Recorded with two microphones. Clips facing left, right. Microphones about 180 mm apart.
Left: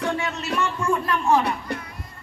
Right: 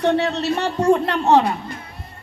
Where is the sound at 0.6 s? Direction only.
70° right (ahead or behind).